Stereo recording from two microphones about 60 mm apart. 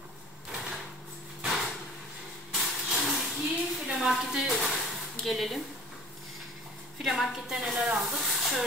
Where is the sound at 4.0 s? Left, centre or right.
Centre.